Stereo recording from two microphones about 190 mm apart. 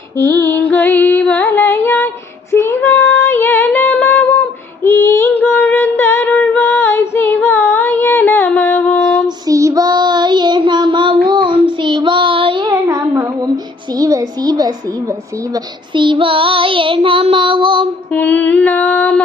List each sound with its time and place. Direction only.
0.4 s music: 10° left (ahead or behind)
2.5 s female singing: 15° left (ahead or behind)
9.5 s child singing: 15° right (ahead or behind)
13.9 s a sound: 15° right (ahead or behind)
15.5 s child singing: 25° right (ahead or behind)
18.1 s a sound: 10° left (ahead or behind)